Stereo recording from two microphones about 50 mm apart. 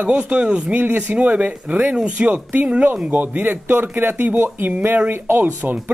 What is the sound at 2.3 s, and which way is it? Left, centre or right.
Speech, right.